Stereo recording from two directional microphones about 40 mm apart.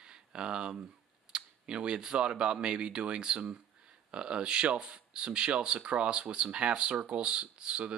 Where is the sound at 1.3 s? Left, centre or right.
Right.